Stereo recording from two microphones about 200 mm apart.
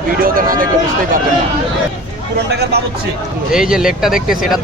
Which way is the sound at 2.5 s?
55° right (ahead or behind).